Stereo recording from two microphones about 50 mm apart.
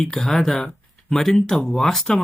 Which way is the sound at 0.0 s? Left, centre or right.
Centre.